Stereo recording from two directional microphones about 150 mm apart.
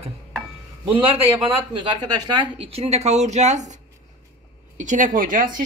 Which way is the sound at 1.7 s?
30° right (ahead or behind).